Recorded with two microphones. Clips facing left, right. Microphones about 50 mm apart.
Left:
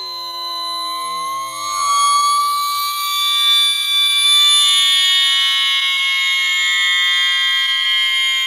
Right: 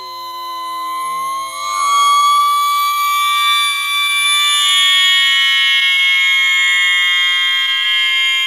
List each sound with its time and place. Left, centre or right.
1.8 s siren: right
5.0 s fire alarm: right